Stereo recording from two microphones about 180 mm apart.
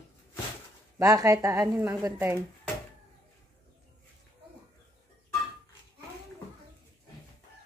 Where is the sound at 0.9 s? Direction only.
20° right (ahead or behind).